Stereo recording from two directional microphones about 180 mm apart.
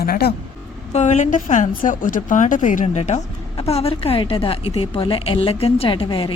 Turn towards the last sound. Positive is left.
turn(degrees=30)  # may be behind; listen again after turning